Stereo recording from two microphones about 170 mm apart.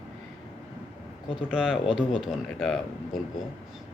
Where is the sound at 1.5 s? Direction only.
5° right (ahead or behind).